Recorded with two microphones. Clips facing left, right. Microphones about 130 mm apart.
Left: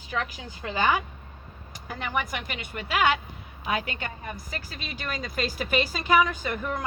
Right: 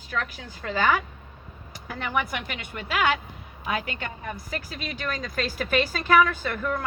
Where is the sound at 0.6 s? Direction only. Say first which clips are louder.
Right 1 dB; 15° left (ahead or behind).